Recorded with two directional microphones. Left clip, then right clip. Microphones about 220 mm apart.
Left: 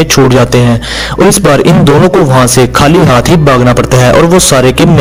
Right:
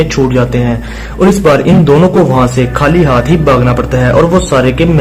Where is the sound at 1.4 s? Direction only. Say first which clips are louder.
Left 1 dB; 35° left (ahead or behind).